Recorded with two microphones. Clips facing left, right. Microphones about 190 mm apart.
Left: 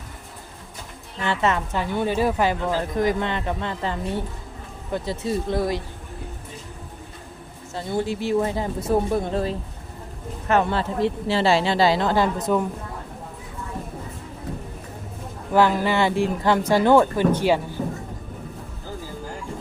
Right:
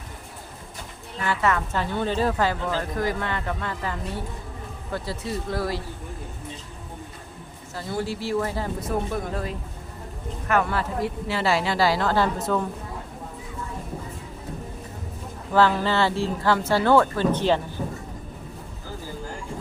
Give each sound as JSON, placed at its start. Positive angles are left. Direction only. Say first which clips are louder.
{"t": 1.2, "sound": "a woman's voice", "louder": "left 1 dB", "side_deg": 25}
{"t": 7.8, "sound": "a woman's voice", "louder": "left 4 dB", "side_deg": 20}
{"t": 15.5, "sound": "speech", "louder": "left 1 dB", "side_deg": 15}